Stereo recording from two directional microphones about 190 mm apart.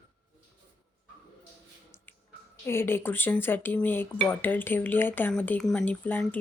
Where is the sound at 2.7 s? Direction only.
10° left (ahead or behind).